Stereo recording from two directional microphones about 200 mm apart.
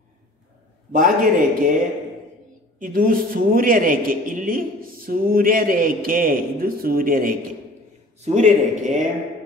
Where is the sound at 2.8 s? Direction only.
45° right (ahead or behind).